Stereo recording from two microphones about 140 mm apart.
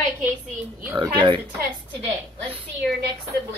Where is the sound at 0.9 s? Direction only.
35° right (ahead or behind).